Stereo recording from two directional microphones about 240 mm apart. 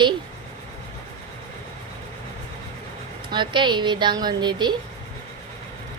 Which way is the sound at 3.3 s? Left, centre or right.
Centre.